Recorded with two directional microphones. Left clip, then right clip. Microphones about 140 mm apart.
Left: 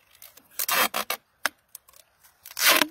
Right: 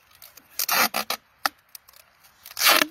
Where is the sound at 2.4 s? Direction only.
Centre (ahead or behind).